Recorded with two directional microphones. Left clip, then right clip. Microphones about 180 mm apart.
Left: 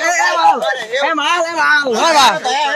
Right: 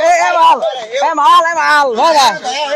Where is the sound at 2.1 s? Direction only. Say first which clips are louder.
Left 3 dB; 10° right (ahead or behind).